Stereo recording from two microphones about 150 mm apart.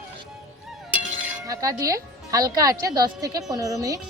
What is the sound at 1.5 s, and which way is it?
Speech, 20° right (ahead or behind).